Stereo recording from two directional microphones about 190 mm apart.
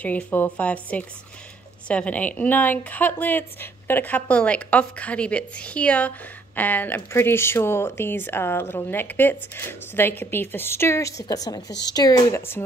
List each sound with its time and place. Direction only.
0.0 s speech: 10° left (ahead or behind)